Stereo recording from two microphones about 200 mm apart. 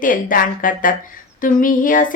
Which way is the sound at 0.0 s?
45° left (ahead or behind).